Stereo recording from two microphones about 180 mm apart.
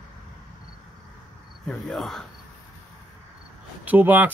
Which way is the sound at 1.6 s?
Centre (ahead or behind).